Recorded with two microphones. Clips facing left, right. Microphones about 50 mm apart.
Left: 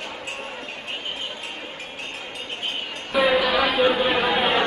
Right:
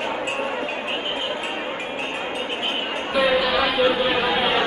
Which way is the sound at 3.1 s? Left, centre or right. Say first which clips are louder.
Even; centre.